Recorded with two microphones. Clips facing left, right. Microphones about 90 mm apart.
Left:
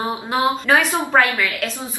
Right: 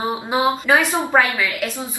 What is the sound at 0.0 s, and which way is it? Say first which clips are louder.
A woman's voice: right 1 dB; 10° right (ahead or behind).